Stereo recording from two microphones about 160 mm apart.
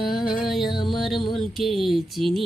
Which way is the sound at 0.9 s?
Centre (ahead or behind).